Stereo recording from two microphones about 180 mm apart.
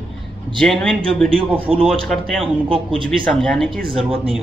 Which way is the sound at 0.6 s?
5° left (ahead or behind).